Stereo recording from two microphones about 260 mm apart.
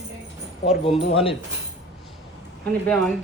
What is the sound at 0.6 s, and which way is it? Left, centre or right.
Speech, left.